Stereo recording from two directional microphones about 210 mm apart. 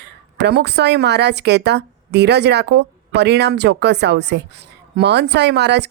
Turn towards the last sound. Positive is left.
turn(degrees=-55)  # may be behind; listen again after turning